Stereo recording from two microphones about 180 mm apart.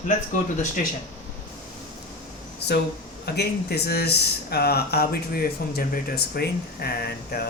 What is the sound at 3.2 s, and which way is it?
Speech, 65° left (ahead or behind).